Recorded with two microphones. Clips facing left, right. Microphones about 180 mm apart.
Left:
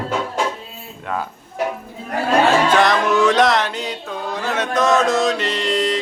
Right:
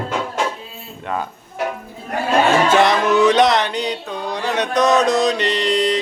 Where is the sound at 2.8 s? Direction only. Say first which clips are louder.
Right 2 dB; centre (ahead or behind).